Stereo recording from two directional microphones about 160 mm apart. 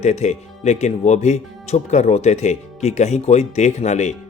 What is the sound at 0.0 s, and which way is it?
Speech, 45° left (ahead or behind).